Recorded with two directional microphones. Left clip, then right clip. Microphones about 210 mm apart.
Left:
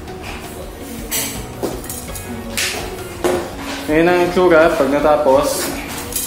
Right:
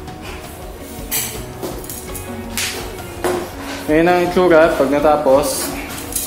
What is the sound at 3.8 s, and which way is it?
Speech, 35° right (ahead or behind).